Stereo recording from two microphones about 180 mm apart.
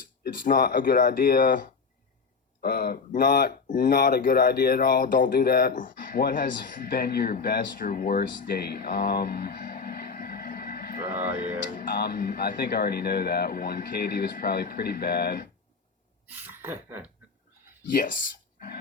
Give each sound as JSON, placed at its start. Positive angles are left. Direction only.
{"t": 0.2, "sound": "speech", "side_deg": 55}
{"t": 11.1, "sound": "speech", "side_deg": -10}
{"t": 11.7, "sound": "speech", "side_deg": 55}
{"t": 16.5, "sound": "a sound", "side_deg": -10}
{"t": 17.9, "sound": "speech", "side_deg": 50}